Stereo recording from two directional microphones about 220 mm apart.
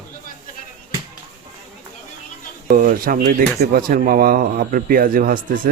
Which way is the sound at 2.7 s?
40° right (ahead or behind).